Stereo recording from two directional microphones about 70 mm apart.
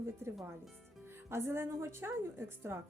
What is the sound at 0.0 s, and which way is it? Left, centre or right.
A woman's voice, right.